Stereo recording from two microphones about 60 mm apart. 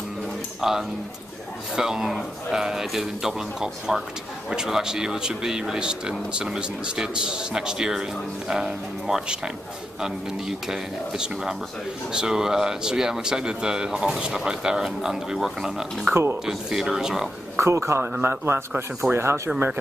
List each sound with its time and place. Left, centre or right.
0.6 s speech: centre
10.7 s speech: centre
17.6 s a man's voice: right